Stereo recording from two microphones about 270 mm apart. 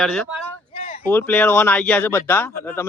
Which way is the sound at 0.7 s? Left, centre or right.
Left.